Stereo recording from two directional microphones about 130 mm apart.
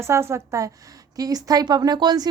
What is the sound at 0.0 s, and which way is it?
Speech, 20° right (ahead or behind).